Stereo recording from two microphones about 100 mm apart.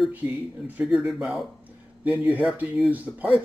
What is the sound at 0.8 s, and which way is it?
Speech, 5° right (ahead or behind).